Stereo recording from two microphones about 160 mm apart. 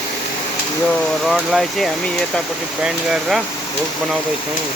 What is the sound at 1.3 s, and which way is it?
Speech, centre (ahead or behind).